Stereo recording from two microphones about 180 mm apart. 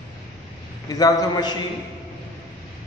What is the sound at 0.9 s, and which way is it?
Speech, 20° left (ahead or behind).